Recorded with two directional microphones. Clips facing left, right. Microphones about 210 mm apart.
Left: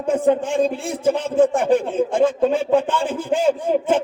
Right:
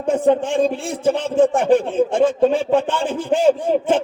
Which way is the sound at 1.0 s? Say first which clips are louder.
Right 1 dB; 30° right (ahead or behind).